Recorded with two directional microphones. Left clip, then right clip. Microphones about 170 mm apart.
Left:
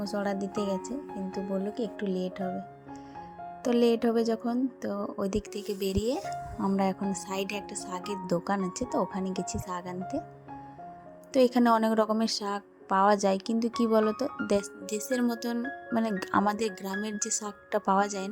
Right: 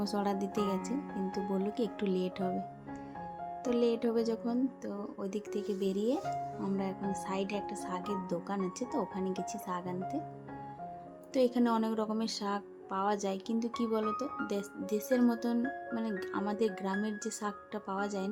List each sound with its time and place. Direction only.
0.0 s speech: 10° left (ahead or behind)
3.6 s speech: 30° left (ahead or behind)
11.3 s speech: 35° left (ahead or behind)